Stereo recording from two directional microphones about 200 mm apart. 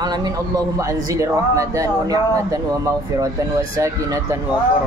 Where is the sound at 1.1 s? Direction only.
15° right (ahead or behind).